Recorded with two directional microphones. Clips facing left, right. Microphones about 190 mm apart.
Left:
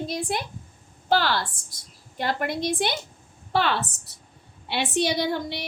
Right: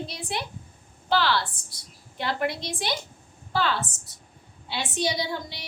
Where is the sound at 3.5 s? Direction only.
65° left (ahead or behind).